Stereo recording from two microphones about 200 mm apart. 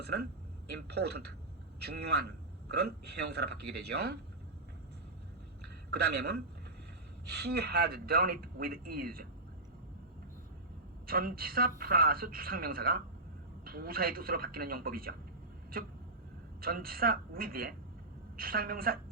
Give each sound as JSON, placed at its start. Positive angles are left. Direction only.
{"t": 0.0, "sound": "a sound", "side_deg": -55}
{"t": 0.9, "sound": "a man's voice", "side_deg": -55}
{"t": 5.9, "sound": "a man's voice", "side_deg": -55}
{"t": 11.0, "sound": "speech", "side_deg": -45}